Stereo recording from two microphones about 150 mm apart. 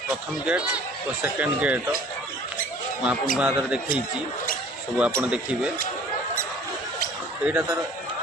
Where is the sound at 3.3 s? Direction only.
5° right (ahead or behind).